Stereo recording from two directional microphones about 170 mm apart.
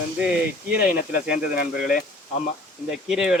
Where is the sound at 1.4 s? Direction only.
55° left (ahead or behind).